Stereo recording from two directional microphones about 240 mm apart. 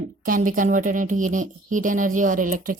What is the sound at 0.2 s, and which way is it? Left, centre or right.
A woman's voice, right.